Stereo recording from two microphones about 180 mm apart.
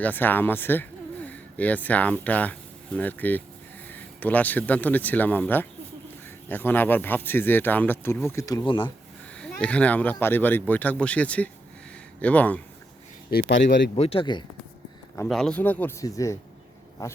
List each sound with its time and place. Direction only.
0.0 s speech: 10° left (ahead or behind)
8.6 s speech: 30° left (ahead or behind)
9.4 s speech: 5° left (ahead or behind)
13.5 s speech: 85° left
13.9 s speech: 30° left (ahead or behind)
15.3 s speech: 5° left (ahead or behind)